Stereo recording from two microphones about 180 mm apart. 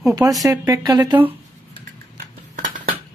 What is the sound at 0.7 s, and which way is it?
Speech, 20° right (ahead or behind).